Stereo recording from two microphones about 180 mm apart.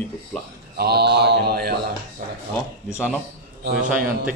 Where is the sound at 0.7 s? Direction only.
60° right (ahead or behind).